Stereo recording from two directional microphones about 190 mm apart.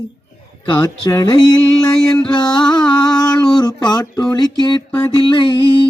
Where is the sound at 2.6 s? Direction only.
5° left (ahead or behind).